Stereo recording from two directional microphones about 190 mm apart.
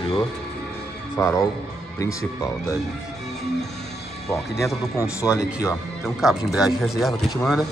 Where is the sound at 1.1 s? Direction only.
15° left (ahead or behind).